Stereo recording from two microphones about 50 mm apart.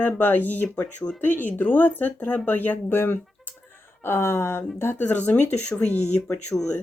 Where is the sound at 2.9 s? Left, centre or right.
Left.